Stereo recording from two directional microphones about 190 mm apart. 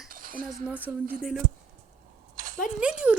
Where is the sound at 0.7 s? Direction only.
5° right (ahead or behind).